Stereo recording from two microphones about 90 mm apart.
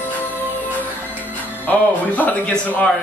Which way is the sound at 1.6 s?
20° left (ahead or behind).